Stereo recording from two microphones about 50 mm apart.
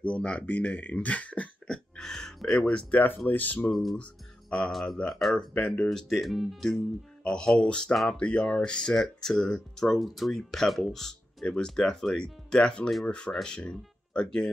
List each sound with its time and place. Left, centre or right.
0.0 s speech: left
1.7 s music: centre
2.6 s speech: left
3.9 s speech: centre
5.9 s speech: centre
7.9 s speech: centre
8.2 s speech: left
9.8 s speech: centre
11.4 s speech: centre